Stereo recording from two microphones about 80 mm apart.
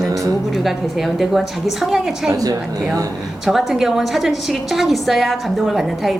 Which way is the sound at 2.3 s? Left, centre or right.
Right.